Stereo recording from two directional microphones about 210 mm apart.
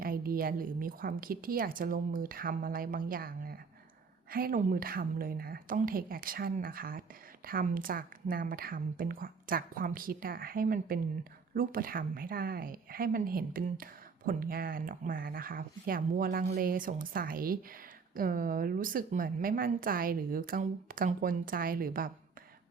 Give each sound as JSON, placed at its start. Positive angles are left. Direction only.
{"t": 0.0, "sound": "a woman's voice", "side_deg": -45}